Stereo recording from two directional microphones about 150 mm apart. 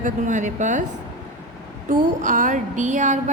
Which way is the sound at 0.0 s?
55° right (ahead or behind).